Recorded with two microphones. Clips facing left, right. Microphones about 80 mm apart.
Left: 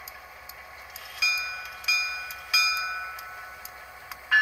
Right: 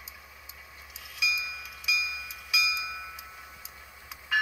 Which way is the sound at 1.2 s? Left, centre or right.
Left.